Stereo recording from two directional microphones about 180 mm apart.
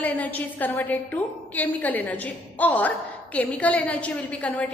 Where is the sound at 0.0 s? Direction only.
10° left (ahead or behind).